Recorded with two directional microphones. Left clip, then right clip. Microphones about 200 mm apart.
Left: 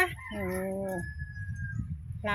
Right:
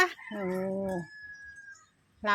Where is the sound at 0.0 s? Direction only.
10° right (ahead or behind).